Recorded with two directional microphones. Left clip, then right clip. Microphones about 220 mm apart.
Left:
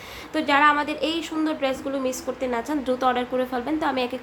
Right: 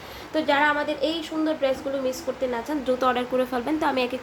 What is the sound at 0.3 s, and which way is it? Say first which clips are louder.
A woman's voice: left 2 dB; 15° left (ahead or behind).